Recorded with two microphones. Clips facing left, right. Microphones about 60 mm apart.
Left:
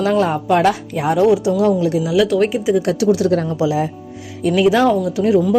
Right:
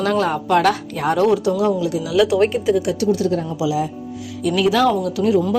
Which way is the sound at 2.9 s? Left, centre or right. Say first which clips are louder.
Left 3 dB; left.